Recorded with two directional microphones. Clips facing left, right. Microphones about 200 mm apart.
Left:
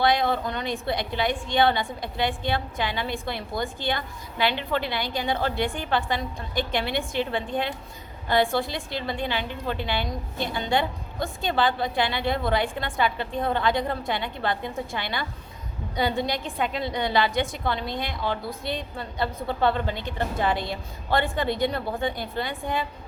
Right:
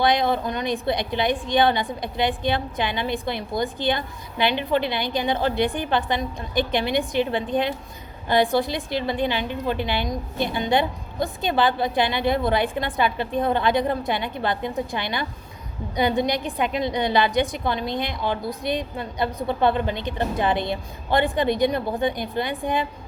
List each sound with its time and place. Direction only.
0.0 s a woman's voice: 20° right (ahead or behind)